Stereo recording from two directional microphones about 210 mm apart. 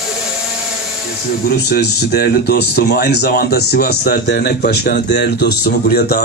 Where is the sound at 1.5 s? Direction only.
50° left (ahead or behind).